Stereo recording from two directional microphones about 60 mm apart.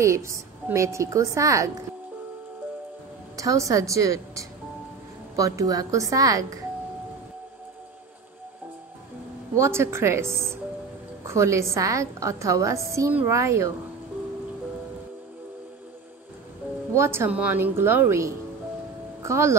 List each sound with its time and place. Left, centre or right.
0.0 s a woman's voice: right
3.3 s a woman's voice: right
5.3 s a woman's voice: right
9.6 s a woman's voice: right
16.9 s speech: right
17.3 s a woman's voice: right
18.0 s a woman's voice: right